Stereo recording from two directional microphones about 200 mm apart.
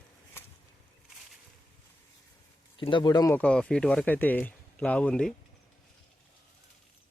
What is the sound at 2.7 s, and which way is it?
Speech, 25° left (ahead or behind).